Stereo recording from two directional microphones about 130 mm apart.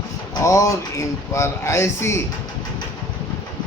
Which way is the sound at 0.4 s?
25° left (ahead or behind).